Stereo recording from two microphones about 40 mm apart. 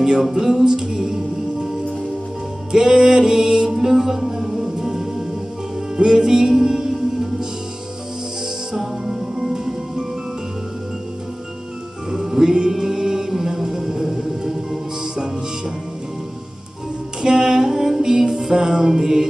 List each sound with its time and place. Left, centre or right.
0.0 s music: centre
2.7 s music: centre
8.7 s music: centre
12.1 s music: centre
17.2 s music: centre